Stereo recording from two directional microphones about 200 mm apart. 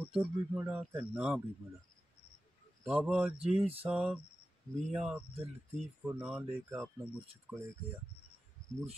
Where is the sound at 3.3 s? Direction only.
30° right (ahead or behind).